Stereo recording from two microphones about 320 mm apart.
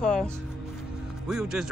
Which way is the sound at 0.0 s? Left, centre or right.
Centre.